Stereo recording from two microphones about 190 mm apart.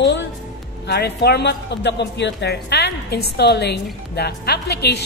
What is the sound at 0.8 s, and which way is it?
Speech, 60° left (ahead or behind).